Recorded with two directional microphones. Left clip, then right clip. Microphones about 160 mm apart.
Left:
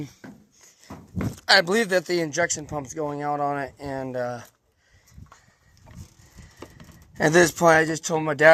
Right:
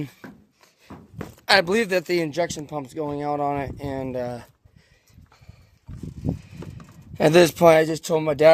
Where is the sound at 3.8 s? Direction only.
45° right (ahead or behind).